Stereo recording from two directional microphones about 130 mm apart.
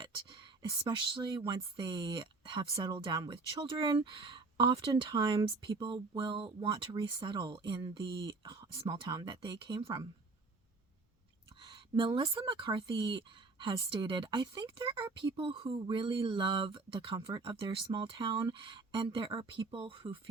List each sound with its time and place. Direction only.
0.0 s speech: 40° right (ahead or behind)
11.6 s speech: 40° right (ahead or behind)